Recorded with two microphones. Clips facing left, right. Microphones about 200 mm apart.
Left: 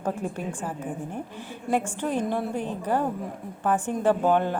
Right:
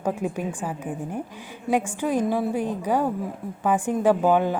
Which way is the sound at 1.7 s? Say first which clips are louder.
Right 3 dB; 10° right (ahead or behind).